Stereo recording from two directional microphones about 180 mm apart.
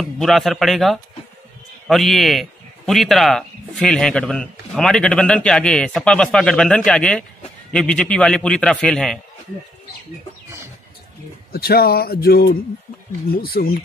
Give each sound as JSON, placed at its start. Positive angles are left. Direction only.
{"t": 0.0, "sound": "a man's voice", "side_deg": 0}
{"t": 11.5, "sound": "speech", "side_deg": 60}